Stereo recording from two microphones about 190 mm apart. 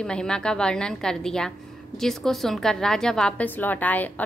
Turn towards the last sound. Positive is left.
turn(degrees=10)  # may be behind; listen again after turning